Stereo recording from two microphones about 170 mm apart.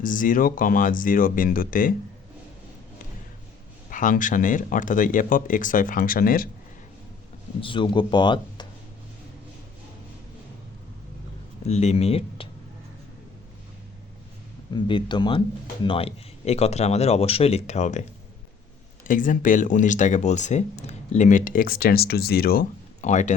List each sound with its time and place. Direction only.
0.0 s speech: 50° left (ahead or behind)
3.8 s speech: 50° left (ahead or behind)
7.6 s speech: 30° left (ahead or behind)
11.6 s speech: 40° left (ahead or behind)
14.7 s speech: 30° left (ahead or behind); by 18.0 s 45° left (ahead or behind)
19.0 s speech: 50° left (ahead or behind)
23.0 s speech: 45° left (ahead or behind)